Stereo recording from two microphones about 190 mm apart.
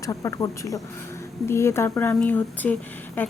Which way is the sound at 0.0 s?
15° left (ahead or behind).